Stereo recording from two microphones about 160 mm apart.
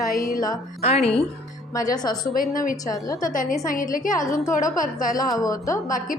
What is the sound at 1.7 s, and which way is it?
Speech, 25° left (ahead or behind).